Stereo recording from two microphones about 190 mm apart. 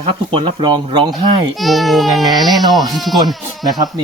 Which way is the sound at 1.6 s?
Centre (ahead or behind).